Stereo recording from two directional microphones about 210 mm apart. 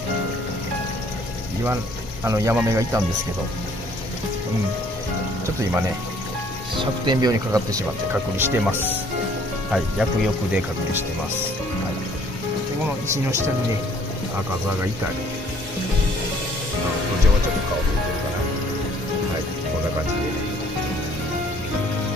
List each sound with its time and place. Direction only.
2.2 s speech: 15° right (ahead or behind)
6.8 s speech: 20° right (ahead or behind)
10.5 s speech: 10° right (ahead or behind)